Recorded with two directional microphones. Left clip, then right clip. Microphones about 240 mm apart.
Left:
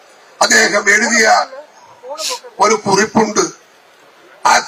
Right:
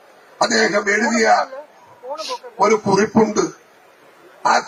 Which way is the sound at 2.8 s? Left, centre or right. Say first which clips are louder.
Left 3 dB; centre.